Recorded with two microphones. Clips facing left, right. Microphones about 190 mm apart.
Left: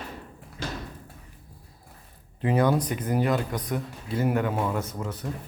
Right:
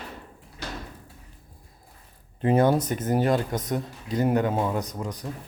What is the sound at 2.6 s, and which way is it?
Speech, 25° right (ahead or behind).